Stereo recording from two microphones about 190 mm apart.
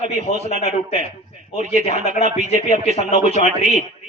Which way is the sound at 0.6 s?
35° left (ahead or behind).